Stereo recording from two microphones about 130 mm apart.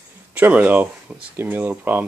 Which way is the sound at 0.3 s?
10° right (ahead or behind).